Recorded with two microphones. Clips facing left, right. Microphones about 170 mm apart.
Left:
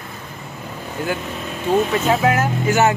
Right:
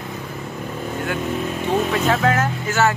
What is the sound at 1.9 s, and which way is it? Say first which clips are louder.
Speech: left 1 dB; 5° left (ahead or behind).